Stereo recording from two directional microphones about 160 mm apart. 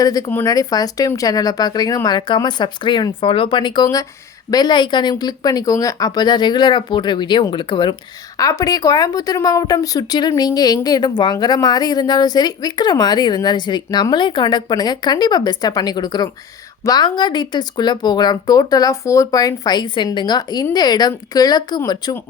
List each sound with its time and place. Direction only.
0.0 s a woman's voice: 25° left (ahead or behind)